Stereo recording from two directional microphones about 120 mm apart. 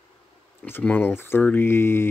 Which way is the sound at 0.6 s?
15° left (ahead or behind).